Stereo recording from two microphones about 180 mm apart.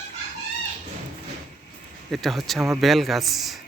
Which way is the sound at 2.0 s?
Centre (ahead or behind).